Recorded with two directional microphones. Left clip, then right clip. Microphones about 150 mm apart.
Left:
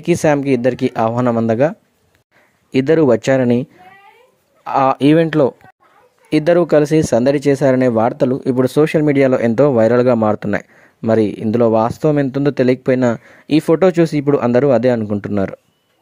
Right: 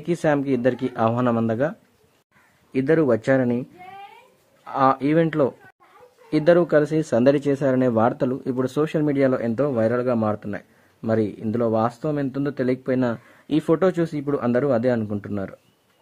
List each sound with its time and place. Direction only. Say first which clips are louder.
0.0 s speech: left 7 dB; 35° left (ahead or behind)
2.7 s speech: left 7 dB; 45° left (ahead or behind)
4.6 s speech: left 7 dB; 45° left (ahead or behind)